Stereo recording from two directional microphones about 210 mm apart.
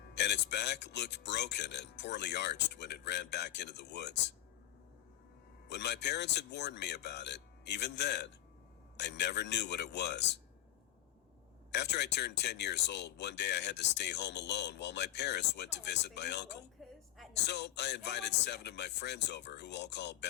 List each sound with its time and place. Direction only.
0.1 s speech: 55° left (ahead or behind)
5.6 s speech: 55° left (ahead or behind)
11.7 s speech: 55° left (ahead or behind)
16.8 s a sound: centre (ahead or behind)
17.3 s speech: 55° left (ahead or behind)